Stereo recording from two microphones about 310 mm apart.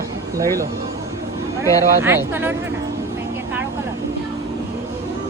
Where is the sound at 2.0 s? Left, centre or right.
Centre.